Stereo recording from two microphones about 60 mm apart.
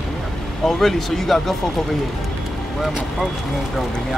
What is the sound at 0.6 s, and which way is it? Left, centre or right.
Speech, centre.